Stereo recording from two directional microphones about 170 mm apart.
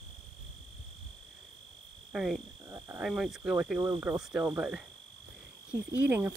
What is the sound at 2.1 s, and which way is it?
Speech, 5° right (ahead or behind).